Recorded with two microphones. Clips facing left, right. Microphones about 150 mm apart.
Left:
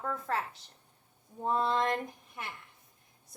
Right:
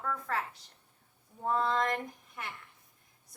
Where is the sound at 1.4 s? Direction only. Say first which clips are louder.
Left 1 dB; 20° left (ahead or behind).